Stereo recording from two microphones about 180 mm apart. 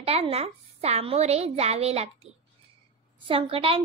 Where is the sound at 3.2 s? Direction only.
30° right (ahead or behind).